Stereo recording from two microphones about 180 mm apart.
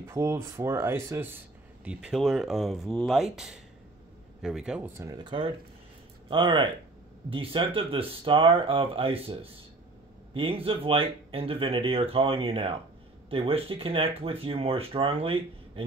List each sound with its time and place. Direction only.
0.0 s speech: 15° right (ahead or behind)
4.4 s speech: 5° right (ahead or behind); by 15.8 s 30° right (ahead or behind)